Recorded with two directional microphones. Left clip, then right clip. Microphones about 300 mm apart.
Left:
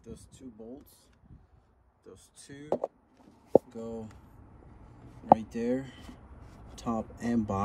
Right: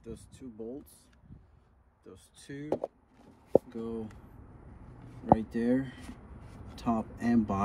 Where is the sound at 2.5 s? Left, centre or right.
Right.